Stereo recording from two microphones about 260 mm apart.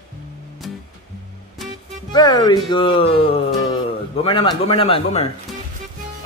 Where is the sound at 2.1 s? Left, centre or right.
Centre.